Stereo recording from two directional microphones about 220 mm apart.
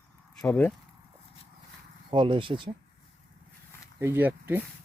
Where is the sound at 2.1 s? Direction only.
25° right (ahead or behind).